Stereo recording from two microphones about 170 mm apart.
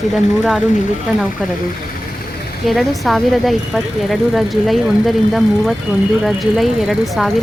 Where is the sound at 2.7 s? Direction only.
Centre (ahead or behind).